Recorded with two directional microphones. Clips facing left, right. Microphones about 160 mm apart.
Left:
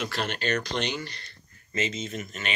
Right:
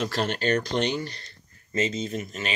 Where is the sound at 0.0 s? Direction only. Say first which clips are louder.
Right 4 dB; 35° right (ahead or behind).